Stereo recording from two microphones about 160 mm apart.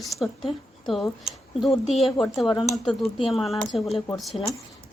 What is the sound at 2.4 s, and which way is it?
Speech, 25° left (ahead or behind).